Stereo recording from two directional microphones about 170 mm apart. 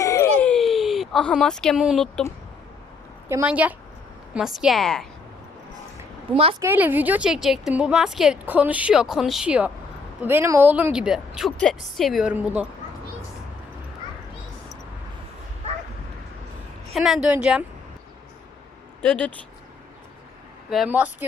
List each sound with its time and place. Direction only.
0.0 s a sound: 15° left (ahead or behind); by 2.2 s centre (ahead or behind)
3.2 s a woman's voice: 10° right (ahead or behind)
6.3 s a woman's voice: 35° right (ahead or behind)
6.6 s a woman's voice: 10° right (ahead or behind)
16.9 s a woman's voice: centre (ahead or behind)
19.0 s speech: 10° left (ahead or behind)
20.7 s a woman's voice: 5° right (ahead or behind)